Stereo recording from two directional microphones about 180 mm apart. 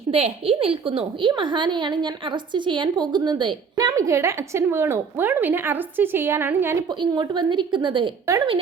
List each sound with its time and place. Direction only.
0.1 s a woman's voice: 35° right (ahead or behind); by 6.7 s 10° right (ahead or behind)
6.9 s a woman's voice: 25° right (ahead or behind)